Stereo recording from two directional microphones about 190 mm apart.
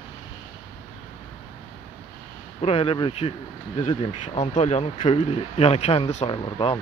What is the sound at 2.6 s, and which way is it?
Speech, 30° left (ahead or behind).